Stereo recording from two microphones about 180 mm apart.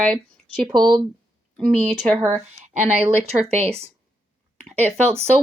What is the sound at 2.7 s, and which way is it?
Speech, 35° right (ahead or behind).